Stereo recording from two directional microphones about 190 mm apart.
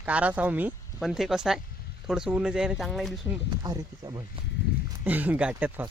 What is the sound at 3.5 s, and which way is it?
Speech, 20° right (ahead or behind).